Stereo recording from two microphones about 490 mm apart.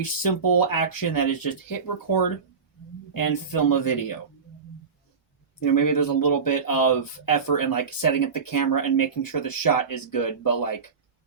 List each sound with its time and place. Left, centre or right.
0.0 s speech: left
3.1 s speech: left
5.6 s speech: left